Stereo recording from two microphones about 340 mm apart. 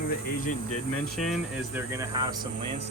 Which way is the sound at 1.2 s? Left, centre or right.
Centre.